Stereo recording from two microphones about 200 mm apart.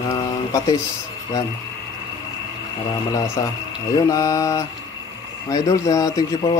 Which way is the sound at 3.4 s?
15° left (ahead or behind).